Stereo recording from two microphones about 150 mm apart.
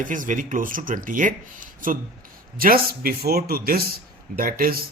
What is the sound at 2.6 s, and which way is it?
A man's voice, 75° right (ahead or behind).